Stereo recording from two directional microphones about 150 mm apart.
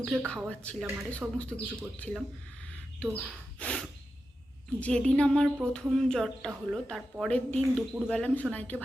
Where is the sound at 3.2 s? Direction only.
5° left (ahead or behind).